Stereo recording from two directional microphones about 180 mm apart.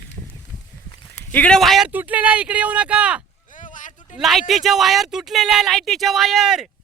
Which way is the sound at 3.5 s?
45° left (ahead or behind).